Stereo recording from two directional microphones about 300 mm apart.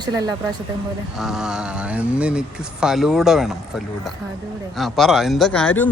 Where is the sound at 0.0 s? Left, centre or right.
Centre.